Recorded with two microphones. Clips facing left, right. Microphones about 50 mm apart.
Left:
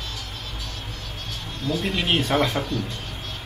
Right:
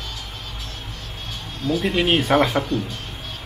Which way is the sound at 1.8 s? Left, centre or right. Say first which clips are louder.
Right 4 dB; right.